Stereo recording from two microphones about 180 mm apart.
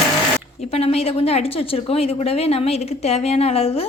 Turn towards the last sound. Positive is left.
turn(degrees=35)  # may be behind; listen again after turning